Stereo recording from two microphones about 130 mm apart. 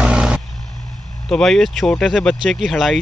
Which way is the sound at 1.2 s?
5° left (ahead or behind).